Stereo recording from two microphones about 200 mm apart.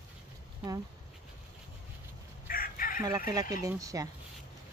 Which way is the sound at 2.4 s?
45° left (ahead or behind).